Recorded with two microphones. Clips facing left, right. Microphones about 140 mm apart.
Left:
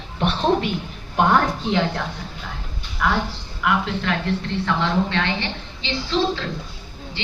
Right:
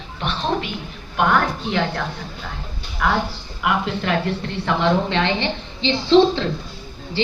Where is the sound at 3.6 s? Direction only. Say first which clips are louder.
Right 1 dB; 10° right (ahead or behind).